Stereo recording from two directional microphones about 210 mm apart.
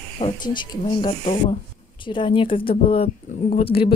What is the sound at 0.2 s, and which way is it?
Speech, 25° left (ahead or behind).